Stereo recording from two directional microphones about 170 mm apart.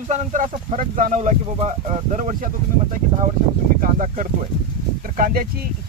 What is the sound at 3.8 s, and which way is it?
Speech, 50° right (ahead or behind).